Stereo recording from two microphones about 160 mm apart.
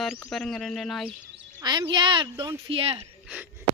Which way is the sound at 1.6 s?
25° right (ahead or behind).